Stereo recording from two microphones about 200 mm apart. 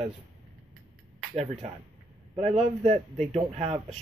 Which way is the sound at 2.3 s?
30° right (ahead or behind).